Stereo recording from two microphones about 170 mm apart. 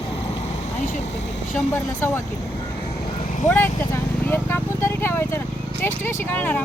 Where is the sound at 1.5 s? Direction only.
10° left (ahead or behind).